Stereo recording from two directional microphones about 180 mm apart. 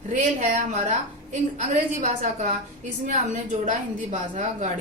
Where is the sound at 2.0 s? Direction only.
40° right (ahead or behind).